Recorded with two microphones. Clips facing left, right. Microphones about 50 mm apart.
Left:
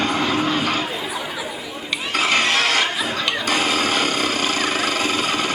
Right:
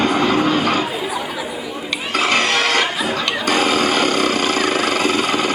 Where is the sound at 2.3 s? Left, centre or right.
Centre.